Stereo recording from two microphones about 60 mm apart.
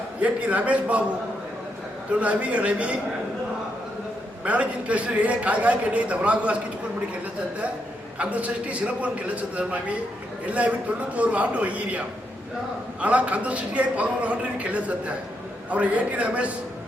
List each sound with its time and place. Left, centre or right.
0.2 s a man's voice: right
2.1 s a man's voice: right
4.4 s a man's voice: right
8.2 s a man's voice: right